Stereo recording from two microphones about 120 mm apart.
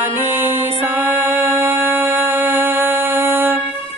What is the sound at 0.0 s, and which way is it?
Music, 20° right (ahead or behind).